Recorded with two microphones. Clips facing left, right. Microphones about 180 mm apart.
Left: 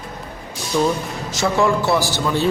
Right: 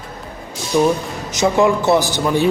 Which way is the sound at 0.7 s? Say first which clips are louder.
Right 3 dB; 15° right (ahead or behind).